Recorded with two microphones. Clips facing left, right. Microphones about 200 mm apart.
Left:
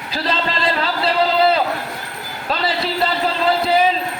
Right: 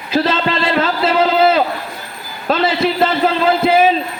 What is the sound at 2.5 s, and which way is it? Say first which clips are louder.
Speech: right 6 dB; 45° right (ahead or behind).